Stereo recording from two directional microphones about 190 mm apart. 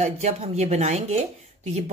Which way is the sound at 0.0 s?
35° right (ahead or behind).